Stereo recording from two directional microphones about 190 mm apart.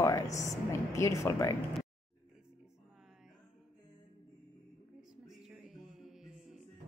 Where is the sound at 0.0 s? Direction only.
15° left (ahead or behind).